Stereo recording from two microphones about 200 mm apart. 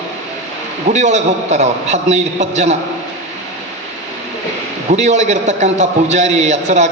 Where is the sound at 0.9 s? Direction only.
35° right (ahead or behind).